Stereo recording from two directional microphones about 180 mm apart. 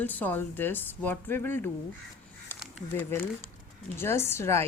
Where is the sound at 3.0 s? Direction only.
10° left (ahead or behind).